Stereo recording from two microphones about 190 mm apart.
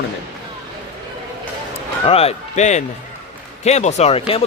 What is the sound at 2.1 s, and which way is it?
A man's voice, 30° left (ahead or behind).